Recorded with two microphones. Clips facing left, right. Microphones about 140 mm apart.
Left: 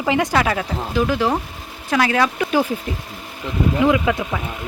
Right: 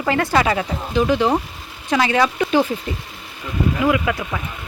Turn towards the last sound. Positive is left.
turn(degrees=15)  # may be behind; listen again after turning